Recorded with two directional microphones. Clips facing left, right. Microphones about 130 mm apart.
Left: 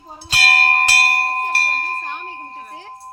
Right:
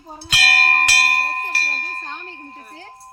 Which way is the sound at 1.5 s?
55° left (ahead or behind).